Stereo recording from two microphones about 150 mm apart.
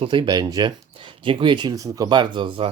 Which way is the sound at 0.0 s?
35° right (ahead or behind).